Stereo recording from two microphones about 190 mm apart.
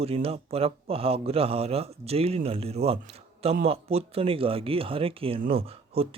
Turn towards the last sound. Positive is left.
turn(degrees=-30)  # may be behind; listen again after turning